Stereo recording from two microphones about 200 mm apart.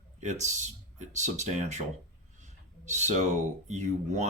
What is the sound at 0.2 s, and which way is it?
Speech, 35° right (ahead or behind).